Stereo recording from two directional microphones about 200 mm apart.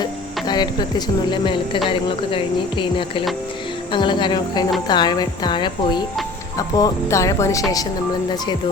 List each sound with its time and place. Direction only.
0.0 s speech: 20° left (ahead or behind)
1.9 s a sound: 25° left (ahead or behind)
6.6 s speech: 20° left (ahead or behind)